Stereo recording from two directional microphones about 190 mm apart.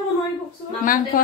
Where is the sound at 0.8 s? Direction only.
45° left (ahead or behind).